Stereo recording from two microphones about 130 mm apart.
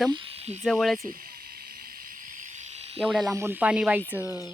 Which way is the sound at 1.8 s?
90° right.